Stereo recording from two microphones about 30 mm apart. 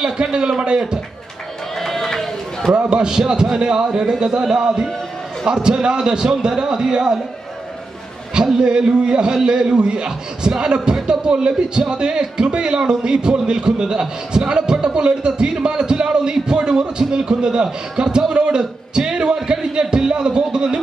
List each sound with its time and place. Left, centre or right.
0.0 s a man's voice: right
1.8 s run: centre
2.7 s a man's voice: right
8.5 s a man's voice: right
18.9 s music: right
19.3 s speech: right